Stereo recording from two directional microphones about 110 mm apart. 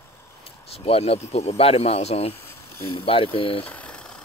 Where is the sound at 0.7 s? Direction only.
60° left (ahead or behind).